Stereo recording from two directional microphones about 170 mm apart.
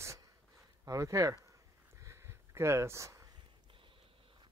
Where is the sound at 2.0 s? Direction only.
15° right (ahead or behind).